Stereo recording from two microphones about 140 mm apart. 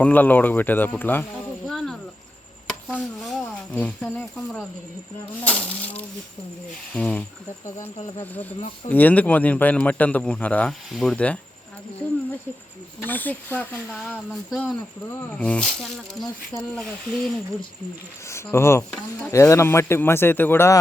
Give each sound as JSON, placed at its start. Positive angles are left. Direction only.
{"t": 0.0, "sound": "a man's voice", "side_deg": 10}
{"t": 1.6, "sound": "cricket", "side_deg": 5}
{"t": 2.6, "sound": "chopping", "side_deg": -5}
{"t": 3.0, "sound": "a sound", "side_deg": 0}
{"t": 3.4, "sound": "speech", "side_deg": 10}
{"t": 5.4, "sound": "a man's voice", "side_deg": 10}
{"t": 13.1, "sound": "a man's voice", "side_deg": 10}
{"t": 15.1, "sound": "a man's voice", "side_deg": 10}
{"t": 18.3, "sound": "a man's voice", "side_deg": 20}